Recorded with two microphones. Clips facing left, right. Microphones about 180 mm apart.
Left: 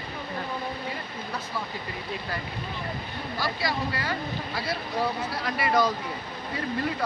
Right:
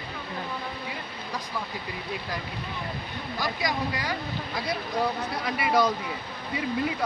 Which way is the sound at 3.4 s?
15° right (ahead or behind).